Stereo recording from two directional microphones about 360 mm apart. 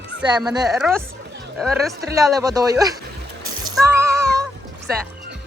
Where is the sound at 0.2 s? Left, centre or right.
Centre.